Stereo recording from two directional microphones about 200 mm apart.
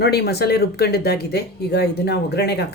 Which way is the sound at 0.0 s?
50° left (ahead or behind).